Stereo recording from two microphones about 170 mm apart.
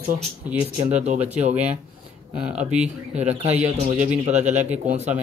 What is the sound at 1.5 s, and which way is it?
Speech, 10° right (ahead or behind).